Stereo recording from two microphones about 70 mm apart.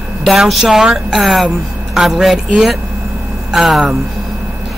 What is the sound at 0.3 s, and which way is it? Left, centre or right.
Speech, centre.